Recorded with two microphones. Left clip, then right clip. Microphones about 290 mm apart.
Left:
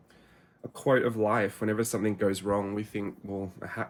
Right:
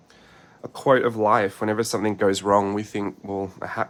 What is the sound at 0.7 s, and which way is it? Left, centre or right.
Speech, centre.